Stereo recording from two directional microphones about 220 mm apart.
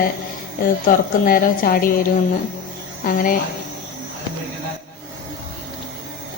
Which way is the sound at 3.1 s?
40° left (ahead or behind).